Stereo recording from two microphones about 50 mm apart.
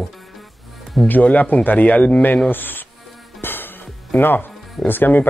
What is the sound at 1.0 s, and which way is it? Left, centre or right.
Speech, left.